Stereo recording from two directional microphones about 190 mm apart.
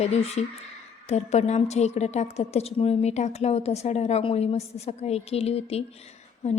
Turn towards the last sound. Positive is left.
turn(degrees=40)  # may be behind; listen again after turning